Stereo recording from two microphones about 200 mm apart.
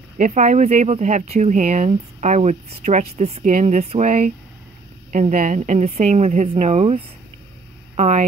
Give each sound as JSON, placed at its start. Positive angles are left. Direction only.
{"t": 0.2, "sound": "speech", "side_deg": -40}